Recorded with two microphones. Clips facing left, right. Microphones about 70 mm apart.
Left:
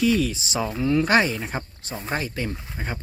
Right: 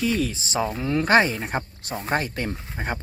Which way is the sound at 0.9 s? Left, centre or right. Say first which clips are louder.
Right 1 dB; right.